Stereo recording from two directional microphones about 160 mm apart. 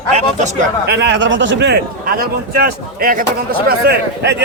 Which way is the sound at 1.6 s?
80° right.